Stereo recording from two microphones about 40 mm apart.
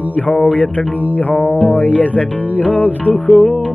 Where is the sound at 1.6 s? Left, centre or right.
Left.